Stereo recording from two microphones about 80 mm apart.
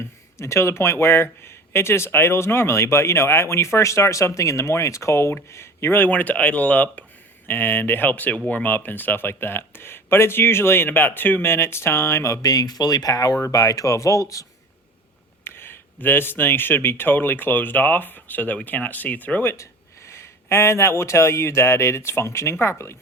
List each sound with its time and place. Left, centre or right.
0.0 s speech: left
6.1 s speech: centre; by 14.4 s left
15.4 s speech: left